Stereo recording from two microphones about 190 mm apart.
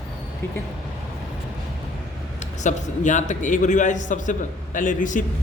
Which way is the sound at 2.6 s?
40° left (ahead or behind).